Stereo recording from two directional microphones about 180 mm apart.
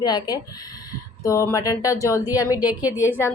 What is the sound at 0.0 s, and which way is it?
A woman's voice, 25° left (ahead or behind).